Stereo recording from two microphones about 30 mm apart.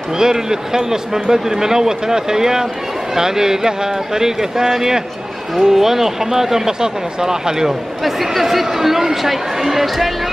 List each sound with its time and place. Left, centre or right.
0.2 s speech: centre
8.0 s speech: centre